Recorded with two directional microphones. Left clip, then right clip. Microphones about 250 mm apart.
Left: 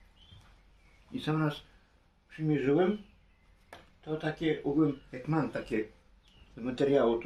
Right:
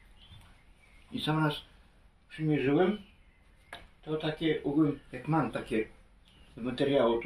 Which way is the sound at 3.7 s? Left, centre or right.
Centre.